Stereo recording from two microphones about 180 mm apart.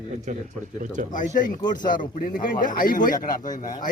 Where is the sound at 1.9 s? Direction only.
50° left (ahead or behind).